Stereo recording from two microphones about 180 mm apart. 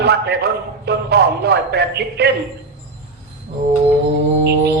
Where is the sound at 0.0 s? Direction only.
65° right (ahead or behind).